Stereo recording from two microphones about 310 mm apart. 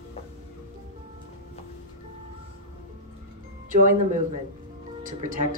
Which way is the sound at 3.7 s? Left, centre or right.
Right.